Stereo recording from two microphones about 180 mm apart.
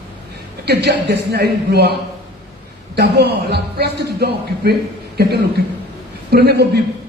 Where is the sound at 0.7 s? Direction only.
65° right (ahead or behind).